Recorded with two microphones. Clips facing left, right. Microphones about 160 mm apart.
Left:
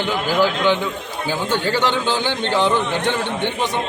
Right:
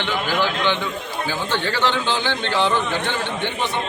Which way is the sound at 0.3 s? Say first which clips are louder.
Left 5 dB; 10° left (ahead or behind).